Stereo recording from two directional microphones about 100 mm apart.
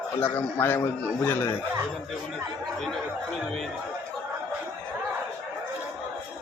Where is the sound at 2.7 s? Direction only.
Centre (ahead or behind).